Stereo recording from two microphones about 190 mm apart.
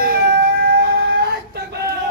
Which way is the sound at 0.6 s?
60° right (ahead or behind).